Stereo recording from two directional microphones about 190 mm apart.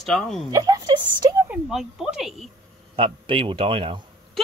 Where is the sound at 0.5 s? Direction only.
20° right (ahead or behind).